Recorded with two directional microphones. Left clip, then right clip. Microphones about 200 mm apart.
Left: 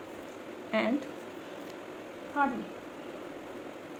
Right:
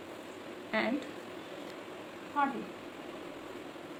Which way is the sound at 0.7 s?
30° left (ahead or behind).